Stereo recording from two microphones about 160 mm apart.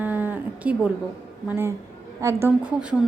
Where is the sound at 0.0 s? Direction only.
10° right (ahead or behind).